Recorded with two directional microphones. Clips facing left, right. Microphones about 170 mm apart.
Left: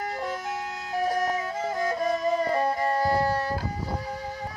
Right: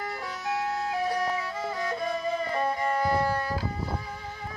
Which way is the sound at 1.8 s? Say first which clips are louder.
Left 5 dB; 40° left (ahead or behind).